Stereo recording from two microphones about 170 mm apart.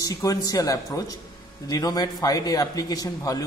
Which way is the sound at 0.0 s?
20° left (ahead or behind).